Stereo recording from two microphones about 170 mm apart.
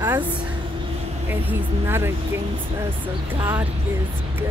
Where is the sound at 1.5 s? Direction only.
15° right (ahead or behind).